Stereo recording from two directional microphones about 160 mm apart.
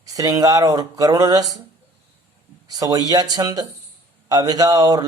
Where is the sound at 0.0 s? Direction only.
20° right (ahead or behind).